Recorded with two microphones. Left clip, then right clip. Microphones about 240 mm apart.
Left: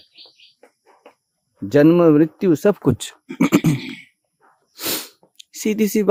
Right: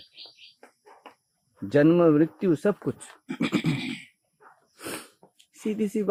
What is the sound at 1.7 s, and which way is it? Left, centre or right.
Speech, left.